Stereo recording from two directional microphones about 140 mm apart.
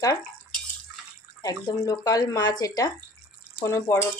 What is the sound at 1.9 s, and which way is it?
Speech, 25° left (ahead or behind).